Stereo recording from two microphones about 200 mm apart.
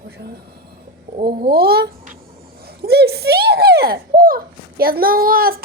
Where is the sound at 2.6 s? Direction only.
50° right (ahead or behind).